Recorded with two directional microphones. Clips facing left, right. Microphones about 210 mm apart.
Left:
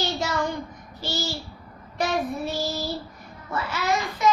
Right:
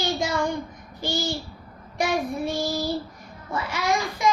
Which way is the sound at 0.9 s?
15° right (ahead or behind).